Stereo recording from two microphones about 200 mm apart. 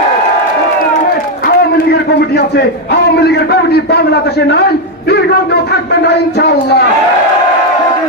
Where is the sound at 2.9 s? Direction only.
55° left (ahead or behind).